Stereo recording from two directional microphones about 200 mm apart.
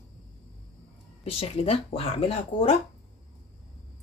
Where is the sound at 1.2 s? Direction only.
30° left (ahead or behind).